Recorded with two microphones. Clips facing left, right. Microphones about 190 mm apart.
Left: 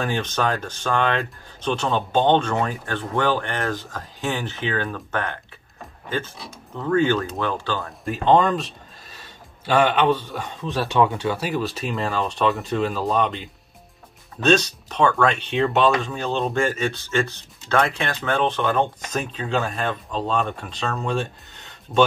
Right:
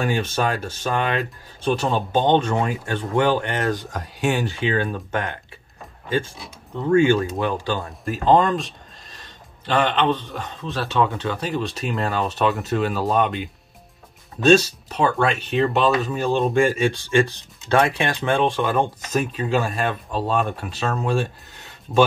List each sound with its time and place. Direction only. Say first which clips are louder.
0.0 s speech: right 1 dB; 10° right (ahead or behind)
6.8 s speech: right 3 dB; 10° right (ahead or behind)
8.0 s a man's voice: even; centre (ahead or behind)
14.5 s speech: right 3 dB; 10° right (ahead or behind)